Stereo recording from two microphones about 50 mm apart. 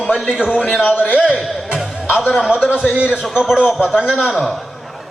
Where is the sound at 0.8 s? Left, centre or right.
Left.